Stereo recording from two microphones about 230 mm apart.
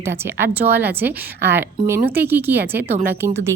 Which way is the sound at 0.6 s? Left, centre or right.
Right.